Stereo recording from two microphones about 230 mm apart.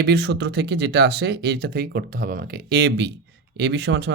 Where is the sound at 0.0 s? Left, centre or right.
Right.